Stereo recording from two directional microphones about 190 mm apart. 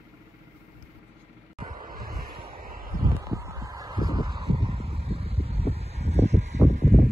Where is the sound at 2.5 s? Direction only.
50° right (ahead or behind).